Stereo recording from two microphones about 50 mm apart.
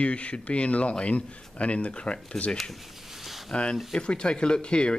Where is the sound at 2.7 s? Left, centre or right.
Centre.